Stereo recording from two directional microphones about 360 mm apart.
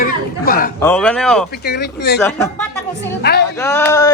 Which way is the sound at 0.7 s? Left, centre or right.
Centre.